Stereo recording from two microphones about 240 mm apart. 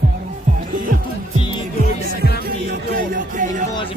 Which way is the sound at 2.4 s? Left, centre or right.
Right.